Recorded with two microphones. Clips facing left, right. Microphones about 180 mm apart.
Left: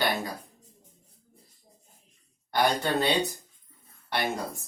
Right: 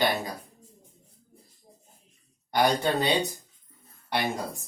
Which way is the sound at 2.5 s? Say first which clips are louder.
Right 1 dB; 15° right (ahead or behind).